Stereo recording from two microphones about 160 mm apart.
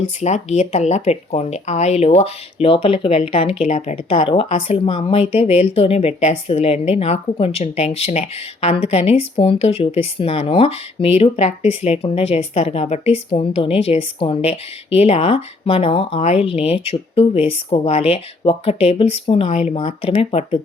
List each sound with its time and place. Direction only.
0.0 s speech: 45° left (ahead or behind)